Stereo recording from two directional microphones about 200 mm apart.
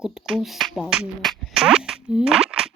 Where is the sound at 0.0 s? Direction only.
Centre (ahead or behind).